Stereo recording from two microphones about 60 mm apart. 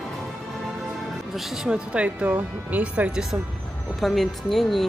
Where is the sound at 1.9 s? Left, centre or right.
Right.